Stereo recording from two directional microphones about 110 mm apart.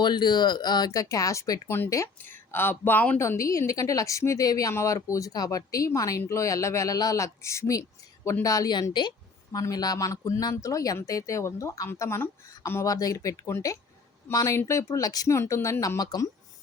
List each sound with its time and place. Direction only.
0.0 s speech: 40° left (ahead or behind); by 3.2 s 15° left (ahead or behind)
3.2 s a woman's voice: 25° left (ahead or behind)
12.9 s a woman's voice: 35° left (ahead or behind)